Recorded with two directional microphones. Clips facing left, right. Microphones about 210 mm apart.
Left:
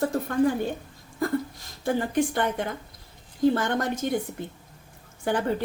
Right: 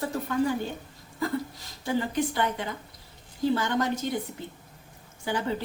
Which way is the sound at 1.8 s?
55° left (ahead or behind).